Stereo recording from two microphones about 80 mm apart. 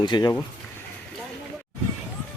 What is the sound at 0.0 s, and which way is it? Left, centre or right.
Speech, left.